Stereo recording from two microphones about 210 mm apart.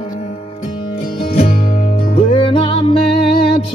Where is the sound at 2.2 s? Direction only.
25° left (ahead or behind).